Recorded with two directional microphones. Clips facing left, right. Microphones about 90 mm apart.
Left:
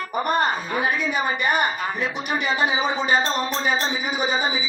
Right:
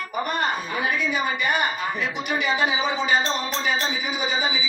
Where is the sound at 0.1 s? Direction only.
40° left (ahead or behind).